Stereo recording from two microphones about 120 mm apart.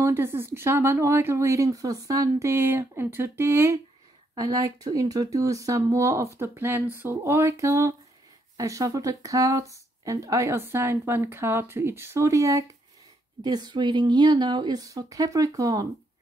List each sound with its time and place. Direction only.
0.0 s speech: 20° right (ahead or behind)
4.4 s speech: 30° right (ahead or behind)